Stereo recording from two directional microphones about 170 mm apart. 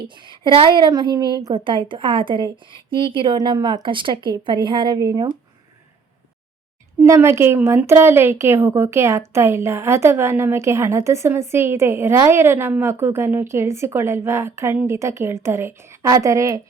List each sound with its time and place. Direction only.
0.2 s a woman's voice: 30° right (ahead or behind)
7.0 s a woman's voice: 15° right (ahead or behind)